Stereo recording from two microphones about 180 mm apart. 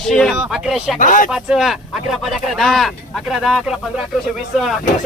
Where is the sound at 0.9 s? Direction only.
45° left (ahead or behind).